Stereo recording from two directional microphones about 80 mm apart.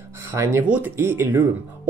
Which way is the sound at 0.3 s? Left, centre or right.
Right.